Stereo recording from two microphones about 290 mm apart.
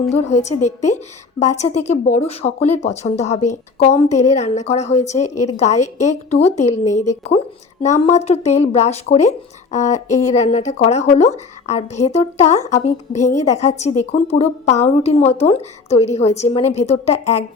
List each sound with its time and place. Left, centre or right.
0.1 s a woman's voice: left
5.3 s a woman's voice: left
5.8 s a woman's voice: left